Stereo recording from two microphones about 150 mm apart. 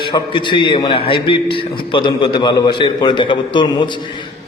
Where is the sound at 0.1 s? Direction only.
30° left (ahead or behind).